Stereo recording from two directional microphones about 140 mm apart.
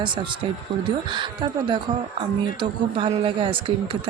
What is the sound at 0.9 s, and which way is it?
A woman's voice, 35° right (ahead or behind).